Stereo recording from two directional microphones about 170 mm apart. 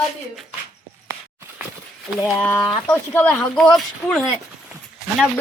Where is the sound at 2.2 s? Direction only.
5° left (ahead or behind).